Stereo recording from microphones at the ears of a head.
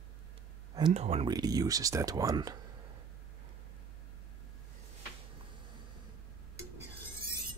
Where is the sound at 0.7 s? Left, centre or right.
Right.